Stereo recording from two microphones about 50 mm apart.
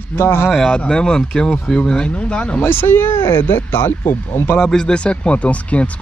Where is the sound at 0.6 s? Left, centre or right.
Centre.